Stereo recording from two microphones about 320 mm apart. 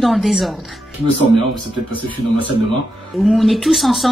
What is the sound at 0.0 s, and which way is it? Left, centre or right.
Speech, centre.